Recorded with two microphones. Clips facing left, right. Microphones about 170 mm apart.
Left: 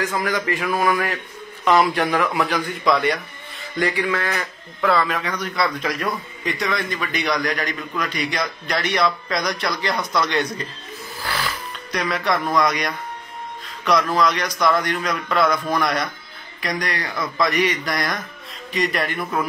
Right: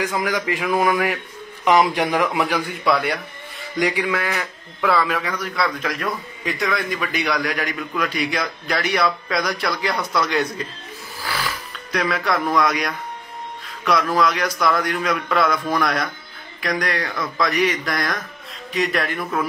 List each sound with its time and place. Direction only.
0.0 s a man's voice: 10° right (ahead or behind)
4.3 s speech: centre (ahead or behind)